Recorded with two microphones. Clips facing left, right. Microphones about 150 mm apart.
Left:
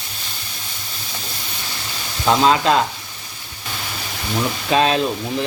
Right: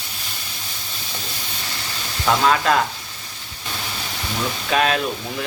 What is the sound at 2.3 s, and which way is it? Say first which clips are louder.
Speech: left 2 dB; 20° left (ahead or behind).